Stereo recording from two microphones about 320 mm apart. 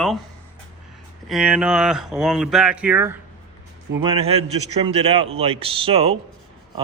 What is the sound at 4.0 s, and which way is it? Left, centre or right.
Speech, centre.